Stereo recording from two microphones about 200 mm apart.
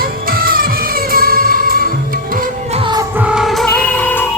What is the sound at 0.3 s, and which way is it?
Music, 45° right (ahead or behind).